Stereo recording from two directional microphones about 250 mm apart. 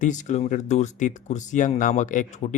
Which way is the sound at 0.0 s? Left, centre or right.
Left.